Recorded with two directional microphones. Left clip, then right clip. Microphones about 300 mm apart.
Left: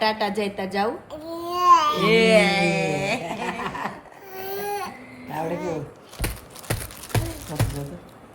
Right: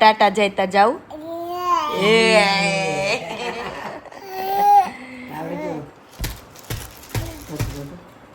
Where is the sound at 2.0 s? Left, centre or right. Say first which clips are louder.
Right 3 dB; centre.